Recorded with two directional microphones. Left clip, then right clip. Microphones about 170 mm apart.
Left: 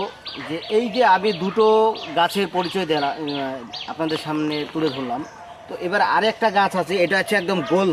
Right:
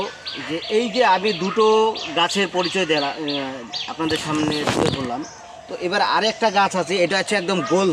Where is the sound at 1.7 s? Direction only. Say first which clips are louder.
Even; 25° left (ahead or behind).